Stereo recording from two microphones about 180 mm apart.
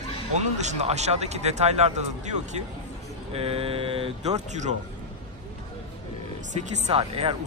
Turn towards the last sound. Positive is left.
turn(degrees=-35)  # may be behind; listen again after turning